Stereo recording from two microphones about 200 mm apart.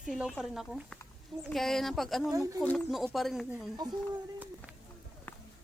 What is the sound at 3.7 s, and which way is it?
Speech, 20° right (ahead or behind).